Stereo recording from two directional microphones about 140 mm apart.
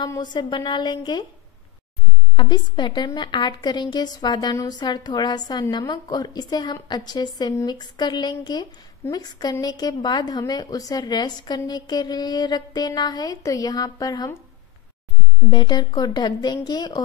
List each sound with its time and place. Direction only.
0.2 s a woman's voice: 30° left (ahead or behind)
2.3 s a woman's voice: 30° left (ahead or behind)
15.5 s a woman's voice: 30° left (ahead or behind)